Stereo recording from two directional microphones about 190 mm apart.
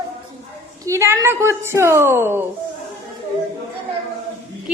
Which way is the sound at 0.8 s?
15° right (ahead or behind).